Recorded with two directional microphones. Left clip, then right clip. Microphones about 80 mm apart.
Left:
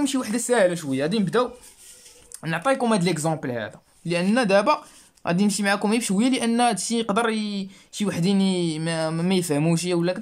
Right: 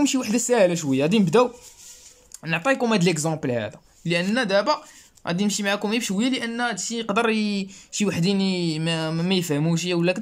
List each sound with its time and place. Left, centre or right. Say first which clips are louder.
0.0 s speech: right 3 dB; centre
1.2 s speech: right 5 dB; right
2.5 s speech: even; centre
4.3 s speech: left 3 dB; left
6.5 s speech: left 5 dB; left
7.2 s speech: right 2 dB; centre
9.9 s speech: right 1 dB; centre